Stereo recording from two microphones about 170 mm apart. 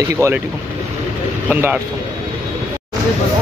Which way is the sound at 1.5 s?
10° right (ahead or behind).